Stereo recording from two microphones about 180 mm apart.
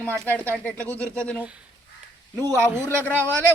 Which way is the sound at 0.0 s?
10° left (ahead or behind).